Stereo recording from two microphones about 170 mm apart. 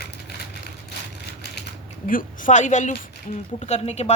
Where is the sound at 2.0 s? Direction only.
50° left (ahead or behind).